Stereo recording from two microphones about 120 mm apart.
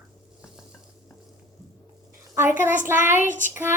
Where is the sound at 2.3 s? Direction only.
20° right (ahead or behind).